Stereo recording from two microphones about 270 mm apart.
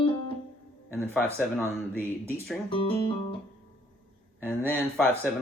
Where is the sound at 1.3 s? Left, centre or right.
Centre.